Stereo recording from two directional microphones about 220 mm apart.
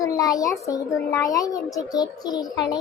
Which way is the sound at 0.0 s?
15° left (ahead or behind).